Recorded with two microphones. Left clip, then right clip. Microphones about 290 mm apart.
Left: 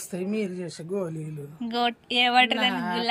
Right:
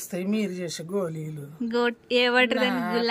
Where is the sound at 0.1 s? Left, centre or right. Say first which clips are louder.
Right 1 dB; right.